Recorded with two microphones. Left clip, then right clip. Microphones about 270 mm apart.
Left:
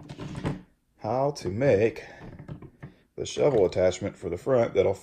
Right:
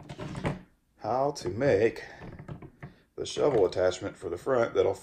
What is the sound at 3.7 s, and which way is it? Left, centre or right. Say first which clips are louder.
Speech: left 3 dB; centre.